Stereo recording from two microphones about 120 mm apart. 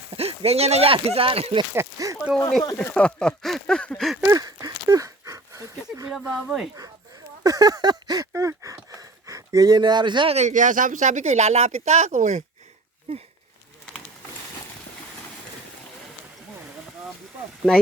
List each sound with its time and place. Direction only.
0.2 s speech: 55° right (ahead or behind)
1.7 s speech: 25° right (ahead or behind)
2.7 s speech: 10° left (ahead or behind)
4.3 s speech: 30° right (ahead or behind)
4.6 s a sound: 30° right (ahead or behind)
6.1 s speech: 5° right (ahead or behind)
7.4 s a sound: 30° right (ahead or behind)
10.3 s speech: 80° right
13.1 s speech: 55° right (ahead or behind)